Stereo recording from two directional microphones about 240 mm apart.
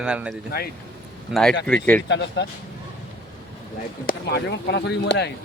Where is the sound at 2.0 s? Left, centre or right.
Left.